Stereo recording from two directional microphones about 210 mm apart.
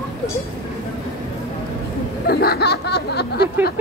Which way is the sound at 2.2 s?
45° left (ahead or behind).